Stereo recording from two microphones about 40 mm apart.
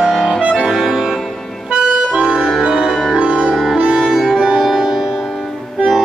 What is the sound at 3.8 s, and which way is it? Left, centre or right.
Music, right.